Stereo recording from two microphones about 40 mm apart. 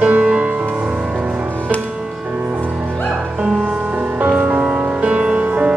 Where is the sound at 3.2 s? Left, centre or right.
Centre.